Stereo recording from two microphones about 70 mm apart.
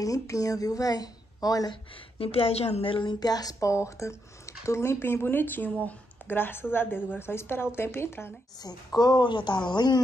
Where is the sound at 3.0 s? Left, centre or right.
Left.